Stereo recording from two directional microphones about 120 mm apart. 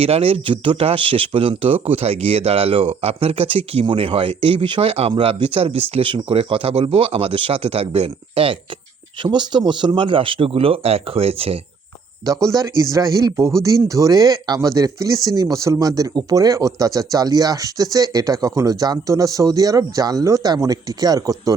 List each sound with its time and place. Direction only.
0.0 s speech: 55° right (ahead or behind)
9.2 s speech: 40° right (ahead or behind); by 11.5 s 55° right (ahead or behind)
12.2 s speech: 25° right (ahead or behind)